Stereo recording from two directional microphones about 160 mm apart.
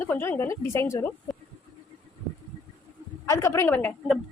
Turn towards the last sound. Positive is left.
turn(degrees=10)  # may be behind; listen again after turning